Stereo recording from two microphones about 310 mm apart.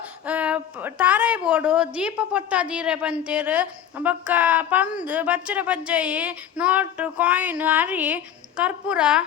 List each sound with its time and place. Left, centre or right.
0.3 s a woman's voice: centre